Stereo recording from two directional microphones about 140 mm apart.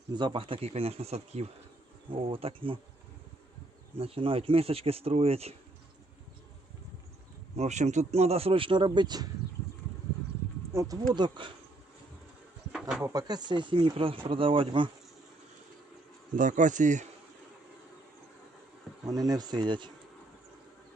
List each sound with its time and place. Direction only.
0.1 s speech: 35° right (ahead or behind)
3.9 s speech: 45° right (ahead or behind)
7.5 s speech: 55° right (ahead or behind); by 9.2 s 30° right (ahead or behind)
10.7 s speech: 20° right (ahead or behind)
11.1 s speech: 35° right (ahead or behind)
13.0 s speech: 30° right (ahead or behind)
16.3 s speech: 65° right (ahead or behind)
19.0 s speech: 25° right (ahead or behind)